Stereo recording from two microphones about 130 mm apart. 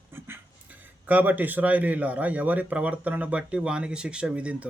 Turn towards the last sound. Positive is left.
turn(degrees=-10)  # may be behind; listen again after turning